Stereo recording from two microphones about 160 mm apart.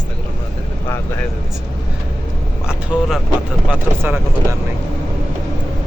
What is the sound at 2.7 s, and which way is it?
Speech, 5° right (ahead or behind).